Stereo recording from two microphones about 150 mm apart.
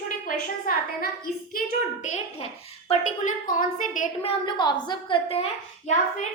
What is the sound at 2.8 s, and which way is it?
A woman's voice, 55° left (ahead or behind).